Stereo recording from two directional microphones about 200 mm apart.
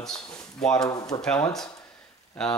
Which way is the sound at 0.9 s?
20° left (ahead or behind).